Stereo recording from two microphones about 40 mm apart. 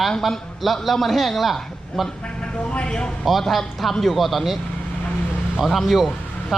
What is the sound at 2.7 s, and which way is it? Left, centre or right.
Speech, left.